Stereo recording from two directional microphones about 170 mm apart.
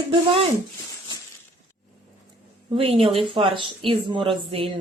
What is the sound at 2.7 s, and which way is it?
Speech, 35° right (ahead or behind).